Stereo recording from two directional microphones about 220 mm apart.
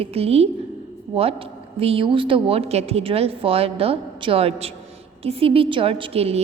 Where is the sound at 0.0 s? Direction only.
25° right (ahead or behind).